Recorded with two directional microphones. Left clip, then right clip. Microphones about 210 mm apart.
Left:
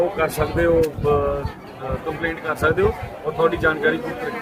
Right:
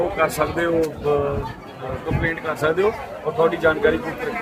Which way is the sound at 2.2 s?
5° left (ahead or behind).